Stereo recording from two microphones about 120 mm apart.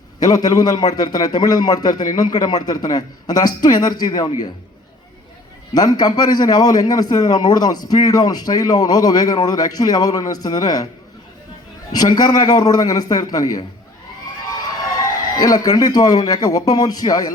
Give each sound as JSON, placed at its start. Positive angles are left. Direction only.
{"t": 0.2, "sound": "a man's voice", "side_deg": 30}
{"t": 5.7, "sound": "a man's voice", "side_deg": 35}
{"t": 11.9, "sound": "a man's voice", "side_deg": 35}
{"t": 14.9, "sound": "a man's voice", "side_deg": 35}